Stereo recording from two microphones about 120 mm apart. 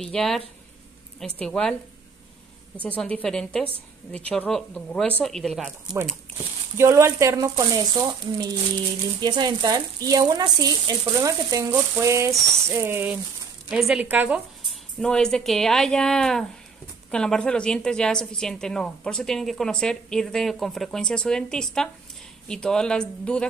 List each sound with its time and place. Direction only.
0.0 s a woman's voice: 5° left (ahead or behind)
2.8 s a woman's voice: 10° left (ahead or behind)
6.8 s speech: 25° right (ahead or behind)
13.7 s a woman's voice: 5° right (ahead or behind)
14.7 s a woman's voice: 5° left (ahead or behind)